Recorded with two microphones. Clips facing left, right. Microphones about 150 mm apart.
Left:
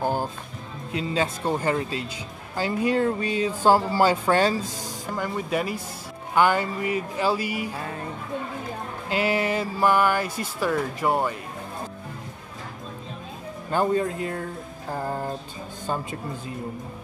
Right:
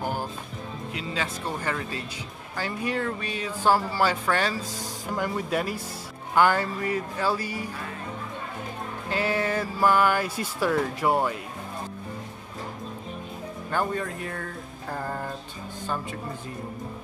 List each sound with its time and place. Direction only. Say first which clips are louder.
0.0 s music: left 5 dB; 20° left (ahead or behind)
0.9 s speech: left 7 dB; 30° left (ahead or behind)
5.1 s speech: even; 5° right (ahead or behind)
9.2 s speech: left 2 dB; 10° left (ahead or behind); by 11.1 s 5° right (ahead or behind)
13.7 s speech: left 5 dB; 20° left (ahead or behind)
15.9 s speech: left 3 dB; 30° left (ahead or behind)